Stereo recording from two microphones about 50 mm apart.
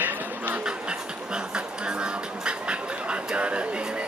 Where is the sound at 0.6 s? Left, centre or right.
Centre.